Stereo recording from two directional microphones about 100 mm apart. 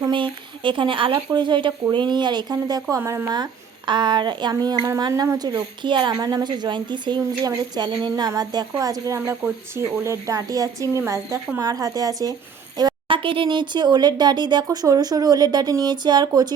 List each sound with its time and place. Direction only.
0.1 s speech: 55° right (ahead or behind)
2.9 s speech: 25° right (ahead or behind)
3.2 s speech: 40° right (ahead or behind)
13.1 s speech: 60° right (ahead or behind); by 16.6 s 40° right (ahead or behind)